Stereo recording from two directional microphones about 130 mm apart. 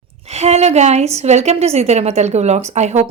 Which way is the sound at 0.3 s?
55° right (ahead or behind).